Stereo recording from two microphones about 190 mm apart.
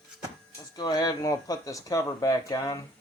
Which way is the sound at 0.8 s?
20° left (ahead or behind).